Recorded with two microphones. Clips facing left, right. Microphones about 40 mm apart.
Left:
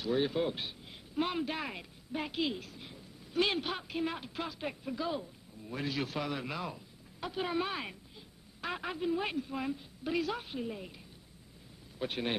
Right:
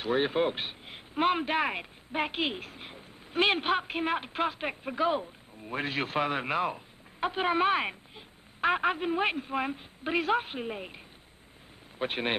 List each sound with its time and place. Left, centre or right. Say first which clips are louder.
0.0 s a woman's voice: right 4 dB; right
12.0 s a woman's voice: right 5 dB; right